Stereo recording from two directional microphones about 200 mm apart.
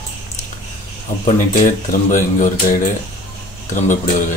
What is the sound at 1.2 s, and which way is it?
Speech, 40° left (ahead or behind).